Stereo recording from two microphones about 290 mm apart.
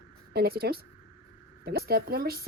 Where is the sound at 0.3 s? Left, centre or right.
Right.